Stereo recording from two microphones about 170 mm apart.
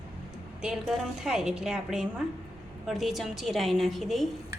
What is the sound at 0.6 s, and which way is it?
A woman's voice, 5° right (ahead or behind).